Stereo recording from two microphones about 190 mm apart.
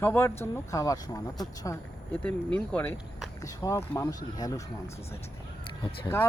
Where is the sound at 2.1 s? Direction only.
5° left (ahead or behind).